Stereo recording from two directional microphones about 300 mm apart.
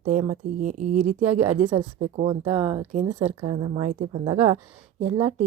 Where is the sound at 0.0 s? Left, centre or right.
Right.